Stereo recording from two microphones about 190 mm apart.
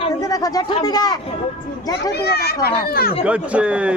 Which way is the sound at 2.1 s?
60° left (ahead or behind).